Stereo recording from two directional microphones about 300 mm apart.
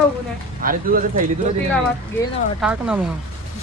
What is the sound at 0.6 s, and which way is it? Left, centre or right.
Speech, right.